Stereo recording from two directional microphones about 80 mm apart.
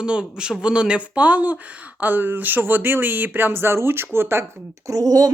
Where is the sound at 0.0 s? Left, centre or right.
Centre; by 4.4 s right.